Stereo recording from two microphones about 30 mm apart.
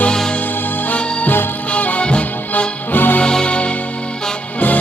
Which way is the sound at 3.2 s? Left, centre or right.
Left.